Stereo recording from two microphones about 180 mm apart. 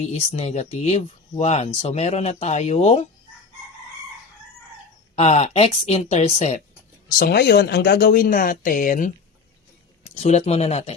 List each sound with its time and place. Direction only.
0.1 s speech: 35° left (ahead or behind)
5.1 s speech: 35° left (ahead or behind)
7.2 s speech: 60° left (ahead or behind)
10.2 s speech: 35° left (ahead or behind)